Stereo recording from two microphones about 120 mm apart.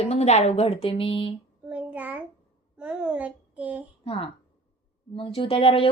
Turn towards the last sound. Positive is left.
turn(degrees=50)  # may be behind; listen again after turning